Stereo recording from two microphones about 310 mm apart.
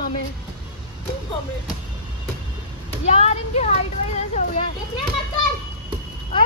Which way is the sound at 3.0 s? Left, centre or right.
Centre.